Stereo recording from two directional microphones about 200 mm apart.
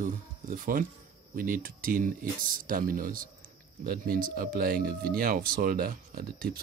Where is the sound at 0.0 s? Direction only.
40° right (ahead or behind).